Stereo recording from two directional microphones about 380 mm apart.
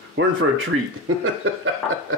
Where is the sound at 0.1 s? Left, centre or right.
Right.